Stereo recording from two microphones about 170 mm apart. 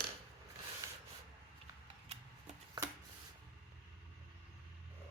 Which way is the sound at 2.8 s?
25° right (ahead or behind).